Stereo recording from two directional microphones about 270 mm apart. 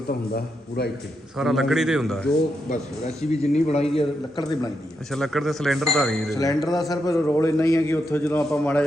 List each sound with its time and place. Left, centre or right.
0.1 s a man's voice: left
1.4 s speech: centre
2.6 s a man's voice: left
5.1 s speech: centre
6.3 s a man's voice: centre
6.6 s speech: centre
6.9 s a man's voice: centre